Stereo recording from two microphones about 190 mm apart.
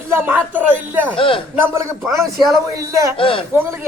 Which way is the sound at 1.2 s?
30° left (ahead or behind).